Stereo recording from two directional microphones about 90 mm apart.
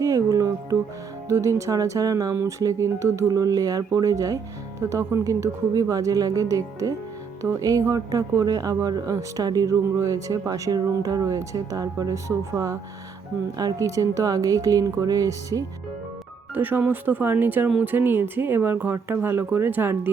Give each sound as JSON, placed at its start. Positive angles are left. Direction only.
{"t": 0.0, "sound": "speech", "side_deg": -40}
{"t": 16.6, "sound": "speech", "side_deg": -20}